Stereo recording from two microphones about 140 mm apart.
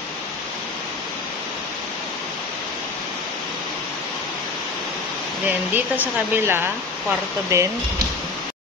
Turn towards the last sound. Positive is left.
turn(degrees=-15)  # may be behind; listen again after turning